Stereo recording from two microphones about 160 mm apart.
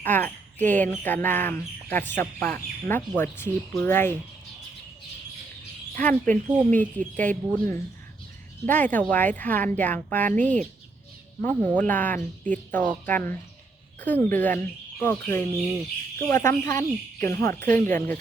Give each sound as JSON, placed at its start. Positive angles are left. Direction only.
{"t": 0.0, "sound": "speech", "side_deg": 10}
{"t": 6.0, "sound": "speech", "side_deg": 10}